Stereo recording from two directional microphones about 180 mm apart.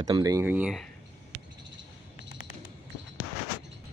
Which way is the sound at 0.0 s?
20° right (ahead or behind).